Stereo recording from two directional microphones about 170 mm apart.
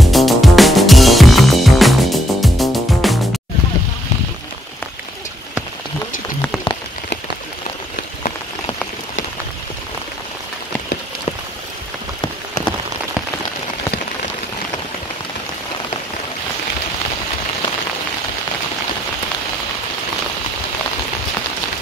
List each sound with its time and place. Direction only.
0.0 s music: centre (ahead or behind)
6.4 s rain on surface: 25° left (ahead or behind)